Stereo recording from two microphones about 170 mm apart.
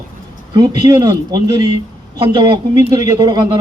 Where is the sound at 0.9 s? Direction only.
20° right (ahead or behind).